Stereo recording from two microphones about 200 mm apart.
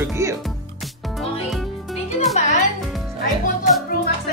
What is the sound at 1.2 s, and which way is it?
Music, centre (ahead or behind).